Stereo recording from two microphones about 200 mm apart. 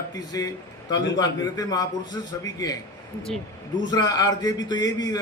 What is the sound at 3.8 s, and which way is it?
Speech, 20° left (ahead or behind).